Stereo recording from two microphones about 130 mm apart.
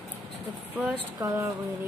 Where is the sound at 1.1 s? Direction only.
25° right (ahead or behind).